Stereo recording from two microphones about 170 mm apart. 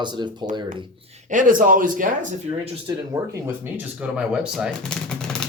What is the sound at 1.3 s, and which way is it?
Speech, 50° right (ahead or behind).